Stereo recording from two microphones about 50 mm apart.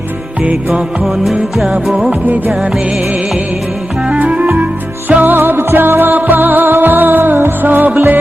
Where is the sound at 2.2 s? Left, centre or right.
Right.